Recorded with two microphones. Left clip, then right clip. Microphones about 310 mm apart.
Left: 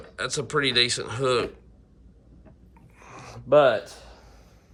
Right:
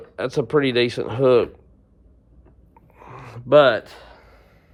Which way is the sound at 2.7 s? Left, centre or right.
Centre.